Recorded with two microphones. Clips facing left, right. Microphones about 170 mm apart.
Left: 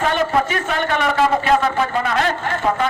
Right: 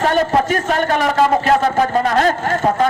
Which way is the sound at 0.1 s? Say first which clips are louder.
Right 3 dB; 40° right (ahead or behind).